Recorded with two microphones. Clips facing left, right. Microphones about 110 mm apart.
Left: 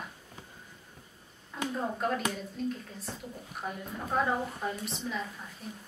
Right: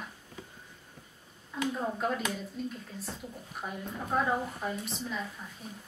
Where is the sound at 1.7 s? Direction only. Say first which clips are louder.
Left 4 dB; 5° right (ahead or behind).